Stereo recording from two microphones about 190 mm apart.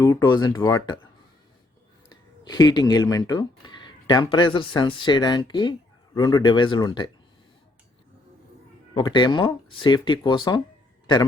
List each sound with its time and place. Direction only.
0.0 s speech: 20° left (ahead or behind)
2.4 s speech: 20° left (ahead or behind)
9.0 s speech: 25° left (ahead or behind)